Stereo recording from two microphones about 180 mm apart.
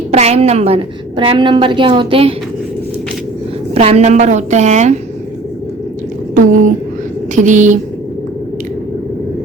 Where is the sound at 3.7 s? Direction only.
35° right (ahead or behind).